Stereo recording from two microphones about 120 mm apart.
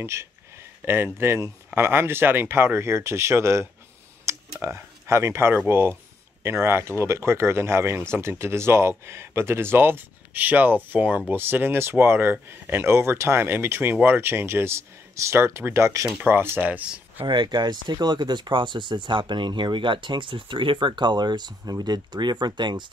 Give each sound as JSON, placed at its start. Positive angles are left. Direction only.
{"t": 0.0, "sound": "speech", "side_deg": -20}
{"t": 17.2, "sound": "speech", "side_deg": -40}